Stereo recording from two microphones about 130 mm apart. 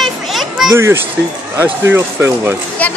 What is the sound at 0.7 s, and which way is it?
Speech, 20° right (ahead or behind).